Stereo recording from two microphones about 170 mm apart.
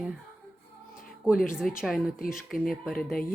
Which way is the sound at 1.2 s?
Centre (ahead or behind).